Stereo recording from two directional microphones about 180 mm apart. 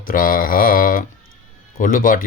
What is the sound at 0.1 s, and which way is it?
Speech, 50° left (ahead or behind).